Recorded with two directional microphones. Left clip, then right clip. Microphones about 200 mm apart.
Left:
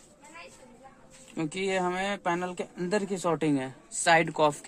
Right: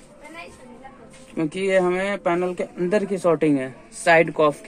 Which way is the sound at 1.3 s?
75° left (ahead or behind).